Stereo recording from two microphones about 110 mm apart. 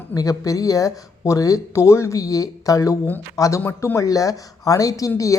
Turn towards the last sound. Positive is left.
turn(degrees=30)  # may be behind; listen again after turning